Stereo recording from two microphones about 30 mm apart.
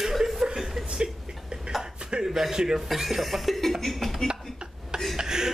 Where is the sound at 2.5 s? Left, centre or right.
Right.